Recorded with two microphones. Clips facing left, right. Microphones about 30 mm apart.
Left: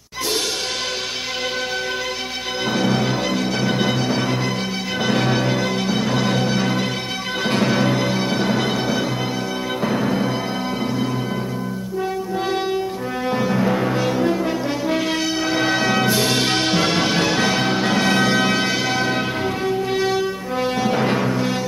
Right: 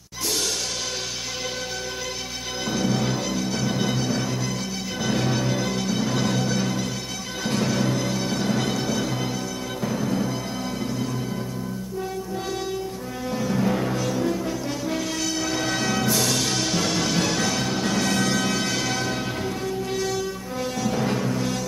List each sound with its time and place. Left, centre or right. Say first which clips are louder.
2.7 s music: left 4 dB; left
13.3 s brass instrument: left 4 dB; left
15.5 s music: left 8 dB; left